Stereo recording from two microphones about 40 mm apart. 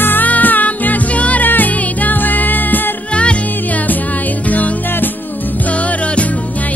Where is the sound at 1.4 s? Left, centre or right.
Left.